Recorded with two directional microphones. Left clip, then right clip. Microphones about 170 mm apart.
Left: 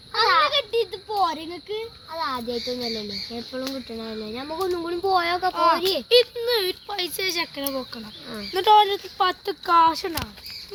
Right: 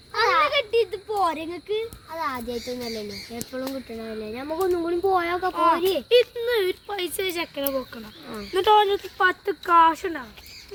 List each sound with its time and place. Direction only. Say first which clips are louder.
0.3 s a sound: left 1 dB; 25° right (ahead or behind)
0.5 s a sound: right 1 dB; 15° left (ahead or behind)
2.1 s a child's voice: left 2 dB; 30° right (ahead or behind)
3.5 s speech: right 2 dB; 5° right (ahead or behind)
5.5 s speech: even; centre (ahead or behind)
5.8 s a child's voice: right 1 dB; 20° right (ahead or behind)
6.1 s speech: left 2 dB; 5° right (ahead or behind); by 9.7 s 20° left (ahead or behind)
9.7 s speech: right 1 dB; 35° left (ahead or behind)